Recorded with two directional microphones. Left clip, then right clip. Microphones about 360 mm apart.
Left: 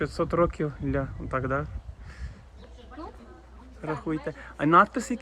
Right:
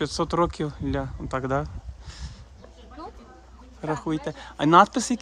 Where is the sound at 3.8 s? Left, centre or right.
Centre.